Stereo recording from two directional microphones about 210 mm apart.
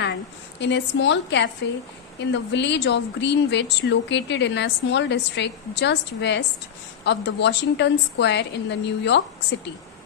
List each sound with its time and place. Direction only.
0.6 s speech: 60° left (ahead or behind)